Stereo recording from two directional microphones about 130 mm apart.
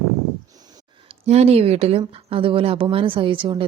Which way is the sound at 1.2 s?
55° right (ahead or behind).